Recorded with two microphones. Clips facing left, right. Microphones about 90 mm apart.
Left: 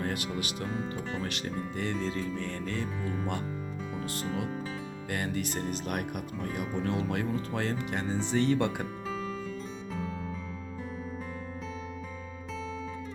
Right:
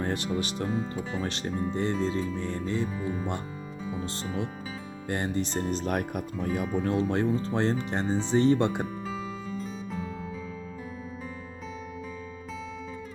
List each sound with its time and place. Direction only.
0.0 s music: 30° right (ahead or behind)
0.3 s speech: 30° right (ahead or behind)
0.7 s speech: centre (ahead or behind)
1.2 s speech: 30° right (ahead or behind); by 3.2 s 10° right (ahead or behind)
5.0 s speech: 25° right (ahead or behind)
9.0 s music: centre (ahead or behind)